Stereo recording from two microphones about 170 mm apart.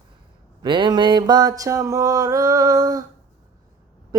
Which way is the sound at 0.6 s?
30° right (ahead or behind).